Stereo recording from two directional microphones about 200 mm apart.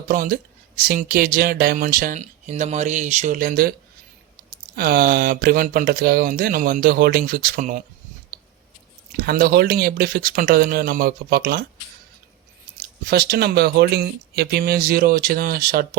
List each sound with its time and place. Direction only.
0.1 s speech: 45° right (ahead or behind)
9.1 s speech: 45° right (ahead or behind)
12.7 s speech: 55° right (ahead or behind)